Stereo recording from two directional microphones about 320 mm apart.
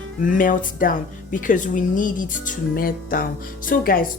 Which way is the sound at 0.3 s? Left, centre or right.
Left.